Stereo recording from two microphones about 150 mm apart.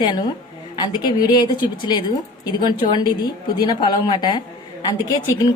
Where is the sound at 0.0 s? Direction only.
30° left (ahead or behind).